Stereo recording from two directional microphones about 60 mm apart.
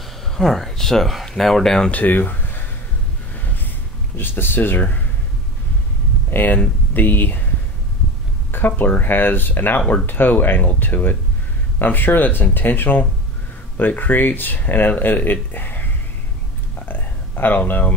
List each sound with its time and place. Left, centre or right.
0.3 s speech: centre
1.9 s speech: left
4.2 s speech: left
6.3 s speech: left
8.5 s speech: left
15.5 s a sound: left